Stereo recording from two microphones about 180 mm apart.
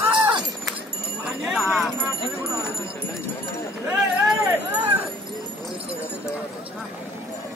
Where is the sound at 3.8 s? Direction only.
15° right (ahead or behind).